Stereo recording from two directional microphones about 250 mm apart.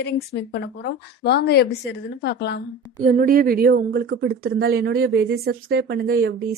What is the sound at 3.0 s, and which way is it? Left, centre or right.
A woman's voice, right.